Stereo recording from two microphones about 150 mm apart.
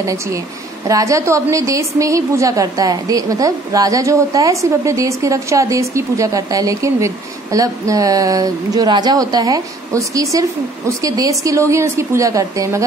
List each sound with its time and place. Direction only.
0.0 s a woman's voice: 20° right (ahead or behind)